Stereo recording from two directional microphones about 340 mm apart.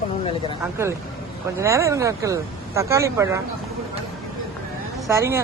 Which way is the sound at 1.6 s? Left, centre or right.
Centre.